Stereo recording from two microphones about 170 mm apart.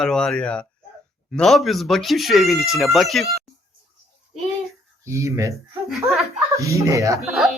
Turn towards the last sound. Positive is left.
turn(degrees=0)  # may be behind; listen again after turning